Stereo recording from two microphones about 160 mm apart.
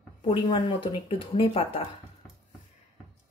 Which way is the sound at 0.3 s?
30° left (ahead or behind).